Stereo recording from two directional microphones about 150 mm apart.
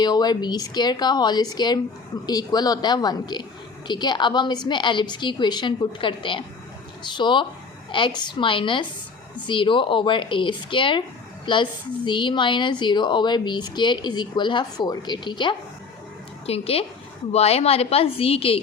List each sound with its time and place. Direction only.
0.0 s a woman's voice: 30° left (ahead or behind)
16.5 s speech: 40° left (ahead or behind)